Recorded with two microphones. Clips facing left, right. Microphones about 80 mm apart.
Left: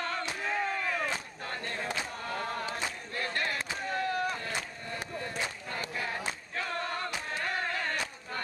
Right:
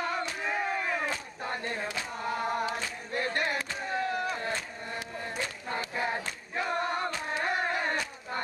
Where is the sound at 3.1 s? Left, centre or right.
Right.